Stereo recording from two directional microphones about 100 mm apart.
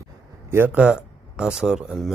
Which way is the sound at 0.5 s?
20° right (ahead or behind).